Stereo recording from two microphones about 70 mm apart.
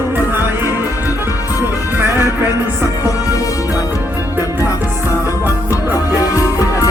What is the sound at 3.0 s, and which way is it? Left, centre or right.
Music, left.